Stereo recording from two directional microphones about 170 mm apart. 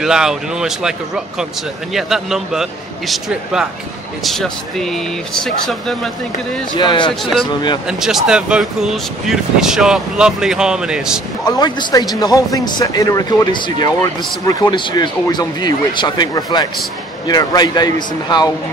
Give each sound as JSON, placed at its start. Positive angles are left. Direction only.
{"t": 0.0, "sound": "speech", "side_deg": -5}
{"t": 6.8, "sound": "speech", "side_deg": 25}
{"t": 8.0, "sound": "speech", "side_deg": -5}
{"t": 11.4, "sound": "speech", "side_deg": 25}